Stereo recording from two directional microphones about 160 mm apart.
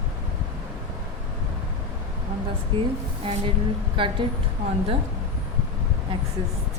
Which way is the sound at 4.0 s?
30° right (ahead or behind).